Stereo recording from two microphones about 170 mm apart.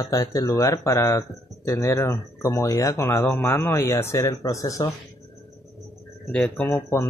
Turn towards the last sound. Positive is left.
turn(degrees=15)  # may be behind; listen again after turning